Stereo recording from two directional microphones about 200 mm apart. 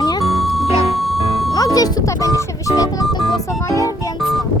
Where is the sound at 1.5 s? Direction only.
20° left (ahead or behind).